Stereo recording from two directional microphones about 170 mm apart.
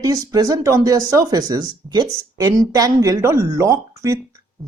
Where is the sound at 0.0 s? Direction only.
20° right (ahead or behind).